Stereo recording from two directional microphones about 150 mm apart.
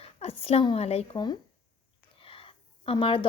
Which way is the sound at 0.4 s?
40° left (ahead or behind).